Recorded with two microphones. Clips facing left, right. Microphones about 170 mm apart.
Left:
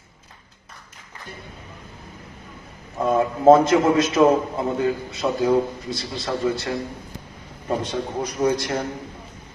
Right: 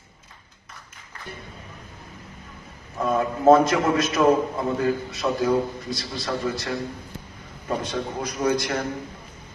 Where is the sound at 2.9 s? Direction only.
25° left (ahead or behind).